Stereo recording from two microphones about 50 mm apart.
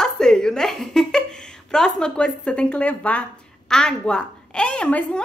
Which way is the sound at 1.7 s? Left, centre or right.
Centre.